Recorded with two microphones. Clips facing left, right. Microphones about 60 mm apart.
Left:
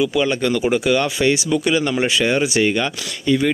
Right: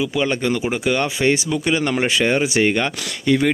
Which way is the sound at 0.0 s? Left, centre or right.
Right.